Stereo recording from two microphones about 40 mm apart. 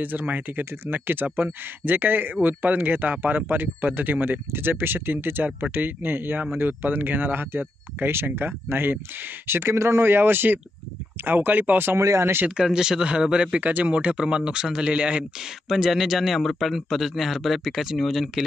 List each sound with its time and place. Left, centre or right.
0.0 s speech: right
7.5 s speech: right
8.4 s speech: right
9.5 s speech: right
11.2 s speech: right
12.5 s speech: centre
13.6 s speech: right
15.7 s a man's voice: centre